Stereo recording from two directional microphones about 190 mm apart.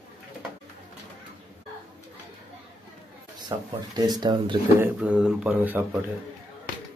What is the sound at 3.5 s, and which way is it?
Speech, 25° right (ahead or behind).